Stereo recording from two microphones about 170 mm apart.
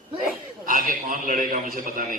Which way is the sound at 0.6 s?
55° right (ahead or behind).